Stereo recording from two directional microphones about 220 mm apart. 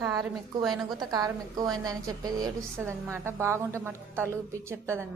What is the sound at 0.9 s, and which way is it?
A woman's voice, 15° right (ahead or behind).